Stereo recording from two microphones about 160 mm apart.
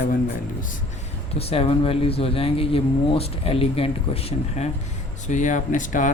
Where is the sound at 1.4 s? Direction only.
40° left (ahead or behind).